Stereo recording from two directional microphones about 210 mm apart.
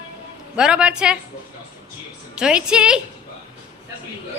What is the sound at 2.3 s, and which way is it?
Speech, 5° right (ahead or behind).